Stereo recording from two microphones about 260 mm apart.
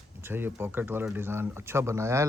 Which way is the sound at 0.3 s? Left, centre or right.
Centre.